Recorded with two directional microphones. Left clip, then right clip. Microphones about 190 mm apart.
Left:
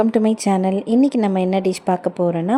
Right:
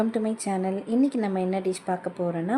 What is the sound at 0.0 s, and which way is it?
Speech, 40° left (ahead or behind).